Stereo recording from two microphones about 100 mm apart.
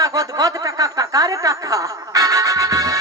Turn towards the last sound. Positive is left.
turn(degrees=-35)  # may be behind; listen again after turning